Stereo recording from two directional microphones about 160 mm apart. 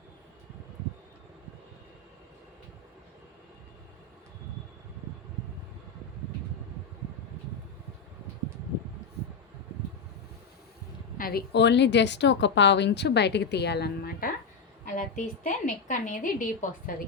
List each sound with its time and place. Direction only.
11.2 s a woman's voice: 70° left (ahead or behind)
14.8 s a woman's voice: 55° left (ahead or behind)